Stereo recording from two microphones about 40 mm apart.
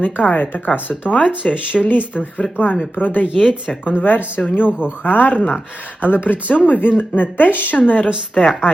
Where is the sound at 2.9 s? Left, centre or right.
Left.